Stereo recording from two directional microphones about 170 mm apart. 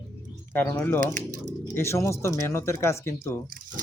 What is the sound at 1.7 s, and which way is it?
Speech, 15° left (ahead or behind).